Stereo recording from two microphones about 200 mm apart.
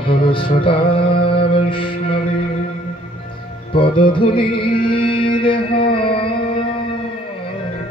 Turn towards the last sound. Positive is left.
turn(degrees=25)  # may be behind; listen again after turning